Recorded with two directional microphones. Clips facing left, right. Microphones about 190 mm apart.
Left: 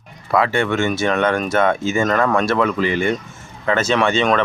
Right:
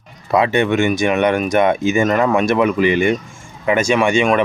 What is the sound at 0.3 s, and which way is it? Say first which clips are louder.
Speech: right 3 dB; 20° right (ahead or behind).